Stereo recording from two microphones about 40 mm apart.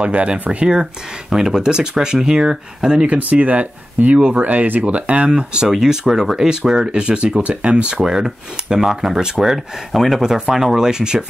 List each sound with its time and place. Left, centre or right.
0.0 s speech: right
1.3 s speech: centre
3.2 s speech: right
5.3 s speech: centre
5.9 s speech: centre; by 8.0 s right
8.0 s speech: centre